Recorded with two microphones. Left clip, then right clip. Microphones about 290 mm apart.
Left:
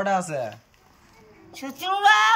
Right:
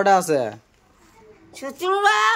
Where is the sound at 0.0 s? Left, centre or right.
Centre.